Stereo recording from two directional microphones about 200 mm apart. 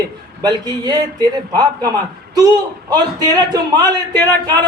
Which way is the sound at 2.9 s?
20° right (ahead or behind).